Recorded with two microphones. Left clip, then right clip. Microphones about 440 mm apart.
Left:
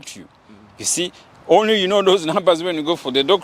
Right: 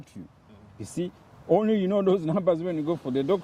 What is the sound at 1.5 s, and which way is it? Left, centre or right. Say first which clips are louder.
Speech: left 9 dB; centre.